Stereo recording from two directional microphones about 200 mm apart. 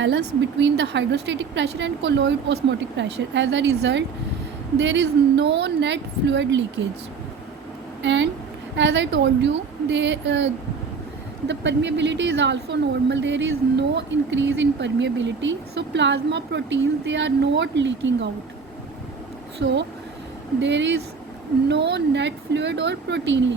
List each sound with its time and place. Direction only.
0.6 s a woman's voice: 60° right (ahead or behind)
8.0 s a woman's voice: 65° right (ahead or behind)
19.5 s a woman's voice: 60° right (ahead or behind)